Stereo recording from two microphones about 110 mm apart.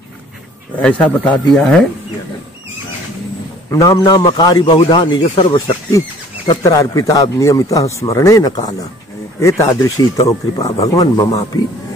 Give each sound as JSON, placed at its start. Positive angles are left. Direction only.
{"t": 0.7, "sound": "speech", "side_deg": 10}
{"t": 3.7, "sound": "speech", "side_deg": 30}
{"t": 5.9, "sound": "a sound", "side_deg": 30}
{"t": 6.6, "sound": "speech", "side_deg": 35}